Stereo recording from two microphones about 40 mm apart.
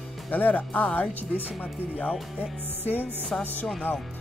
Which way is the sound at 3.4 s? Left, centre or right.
Left.